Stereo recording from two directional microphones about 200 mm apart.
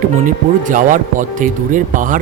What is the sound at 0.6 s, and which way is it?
Speech, 40° right (ahead or behind).